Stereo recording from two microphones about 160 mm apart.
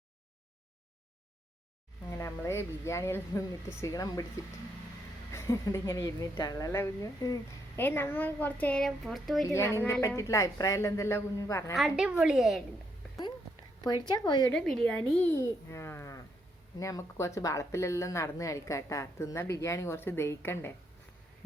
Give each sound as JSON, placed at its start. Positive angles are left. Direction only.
{"t": 2.0, "sound": "speech", "side_deg": 15}
{"t": 5.3, "sound": "speech", "side_deg": 20}
{"t": 9.5, "sound": "speech", "side_deg": 15}
{"t": 11.7, "sound": "a woman's voice", "side_deg": -5}
{"t": 13.8, "sound": "speech", "side_deg": 25}
{"t": 14.5, "sound": "a woman's voice", "side_deg": 5}
{"t": 15.3, "sound": "speech", "side_deg": 20}